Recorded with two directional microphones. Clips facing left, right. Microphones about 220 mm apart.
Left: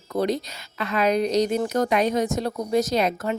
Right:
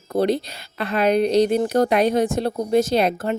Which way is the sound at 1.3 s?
30° right (ahead or behind).